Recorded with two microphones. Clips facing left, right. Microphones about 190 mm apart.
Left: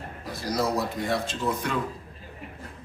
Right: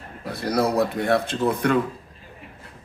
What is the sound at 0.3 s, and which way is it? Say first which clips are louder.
Speech: right 5 dB; 60° right (ahead or behind).